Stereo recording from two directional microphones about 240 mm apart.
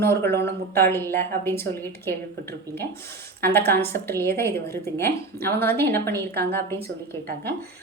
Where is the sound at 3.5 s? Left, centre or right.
Centre.